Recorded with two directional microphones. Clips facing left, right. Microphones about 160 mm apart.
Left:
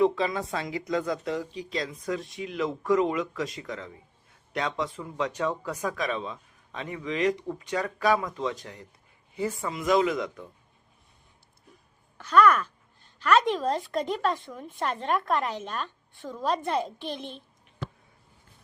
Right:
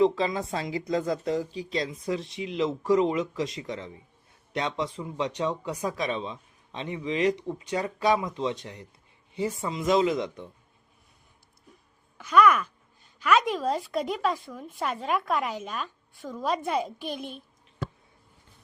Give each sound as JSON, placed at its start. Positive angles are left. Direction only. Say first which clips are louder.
{"t": 0.0, "sound": "speech", "louder": "right 1 dB", "side_deg": -25}
{"t": 12.1, "sound": "speech", "louder": "even", "side_deg": -10}